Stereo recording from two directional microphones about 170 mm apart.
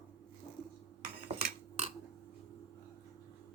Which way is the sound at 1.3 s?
35° right (ahead or behind).